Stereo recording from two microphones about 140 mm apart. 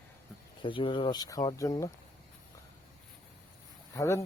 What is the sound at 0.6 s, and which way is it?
Speech, 35° left (ahead or behind).